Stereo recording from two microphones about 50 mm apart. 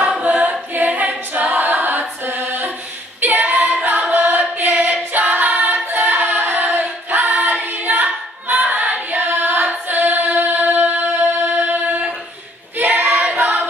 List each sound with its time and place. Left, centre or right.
0.2 s a capella: right
3.8 s chant: right
4.3 s singing: right
7.1 s choir: right
9.8 s singing: right
12.7 s child singing: right